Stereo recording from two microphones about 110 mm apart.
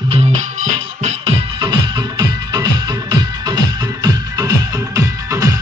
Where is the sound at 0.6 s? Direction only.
85° right.